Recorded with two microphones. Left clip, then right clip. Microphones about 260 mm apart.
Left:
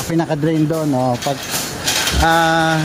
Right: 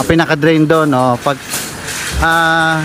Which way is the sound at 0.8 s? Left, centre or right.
Right.